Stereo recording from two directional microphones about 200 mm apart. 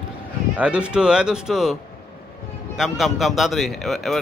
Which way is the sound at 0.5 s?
5° right (ahead or behind).